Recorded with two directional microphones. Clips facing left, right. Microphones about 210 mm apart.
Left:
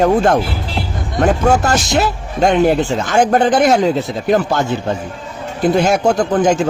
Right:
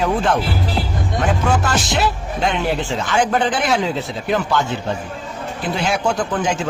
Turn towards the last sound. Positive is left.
turn(degrees=40)  # may be behind; listen again after turning